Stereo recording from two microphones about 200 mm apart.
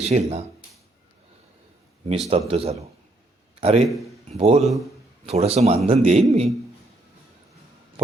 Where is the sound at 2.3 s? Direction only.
30° right (ahead or behind).